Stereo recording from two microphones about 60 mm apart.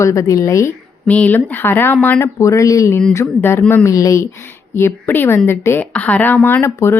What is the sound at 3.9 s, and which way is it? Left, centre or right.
Speech, left.